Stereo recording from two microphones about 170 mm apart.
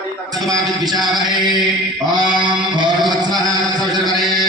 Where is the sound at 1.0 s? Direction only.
25° right (ahead or behind).